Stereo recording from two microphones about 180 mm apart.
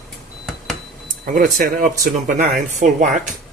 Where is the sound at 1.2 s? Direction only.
45° right (ahead or behind).